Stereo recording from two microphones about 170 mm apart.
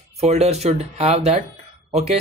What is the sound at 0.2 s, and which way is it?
Speech, 40° right (ahead or behind).